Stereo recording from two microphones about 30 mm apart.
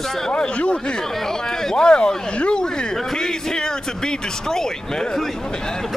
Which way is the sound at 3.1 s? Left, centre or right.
Left.